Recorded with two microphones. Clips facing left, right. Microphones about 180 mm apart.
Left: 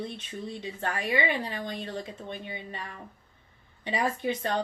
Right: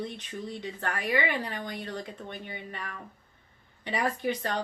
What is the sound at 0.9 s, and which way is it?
A woman's voice, 25° left (ahead or behind).